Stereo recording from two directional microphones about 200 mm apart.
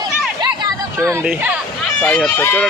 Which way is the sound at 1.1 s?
10° right (ahead or behind).